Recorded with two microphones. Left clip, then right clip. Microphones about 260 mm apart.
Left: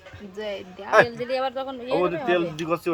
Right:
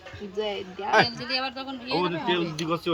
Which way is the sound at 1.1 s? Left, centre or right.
Left.